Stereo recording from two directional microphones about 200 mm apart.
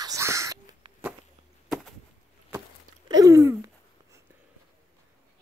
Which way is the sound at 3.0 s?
20° right (ahead or behind).